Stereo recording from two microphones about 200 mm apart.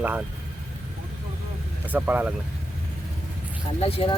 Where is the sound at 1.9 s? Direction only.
10° right (ahead or behind).